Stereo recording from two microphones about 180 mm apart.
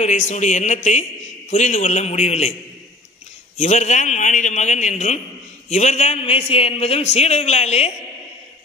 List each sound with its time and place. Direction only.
0.0 s a man's voice: 40° left (ahead or behind)
3.5 s a man's voice: 40° left (ahead or behind)